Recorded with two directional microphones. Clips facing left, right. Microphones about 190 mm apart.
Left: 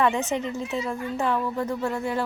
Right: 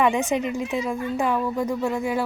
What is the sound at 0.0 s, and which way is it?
A woman's voice, 15° right (ahead or behind).